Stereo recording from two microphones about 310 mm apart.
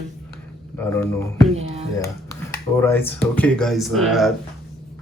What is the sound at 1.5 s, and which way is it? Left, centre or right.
Speech, centre.